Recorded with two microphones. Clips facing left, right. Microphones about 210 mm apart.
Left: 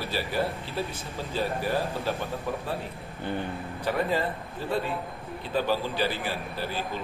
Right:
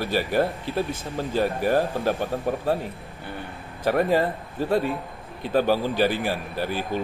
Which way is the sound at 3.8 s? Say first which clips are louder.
Right 6 dB; 45° right (ahead or behind).